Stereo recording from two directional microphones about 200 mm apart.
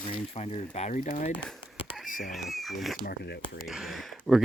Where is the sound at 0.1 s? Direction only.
30° left (ahead or behind).